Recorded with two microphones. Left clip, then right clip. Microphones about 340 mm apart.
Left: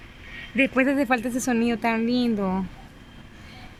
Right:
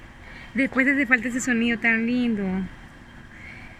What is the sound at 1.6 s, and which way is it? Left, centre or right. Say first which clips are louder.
Speech: right 5 dB; centre.